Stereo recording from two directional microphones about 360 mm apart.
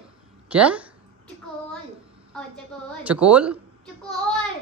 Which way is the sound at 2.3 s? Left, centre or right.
Centre.